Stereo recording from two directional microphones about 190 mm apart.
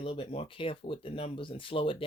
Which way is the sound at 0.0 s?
30° left (ahead or behind).